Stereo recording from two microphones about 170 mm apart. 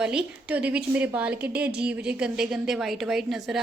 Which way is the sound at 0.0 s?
5° right (ahead or behind).